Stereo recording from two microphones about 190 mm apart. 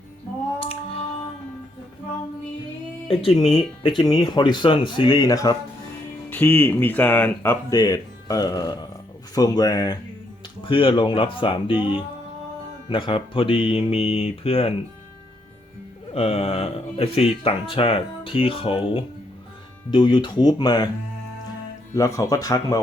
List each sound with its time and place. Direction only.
0.6 s music: 30° left (ahead or behind)
3.1 s speech: 30° left (ahead or behind)
16.1 s speech: 30° left (ahead or behind)
21.9 s speech: 15° left (ahead or behind)